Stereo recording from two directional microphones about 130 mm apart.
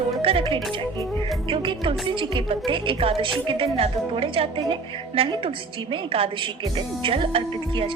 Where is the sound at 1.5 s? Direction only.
45° right (ahead or behind).